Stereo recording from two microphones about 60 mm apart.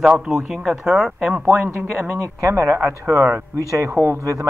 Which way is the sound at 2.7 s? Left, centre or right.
Right.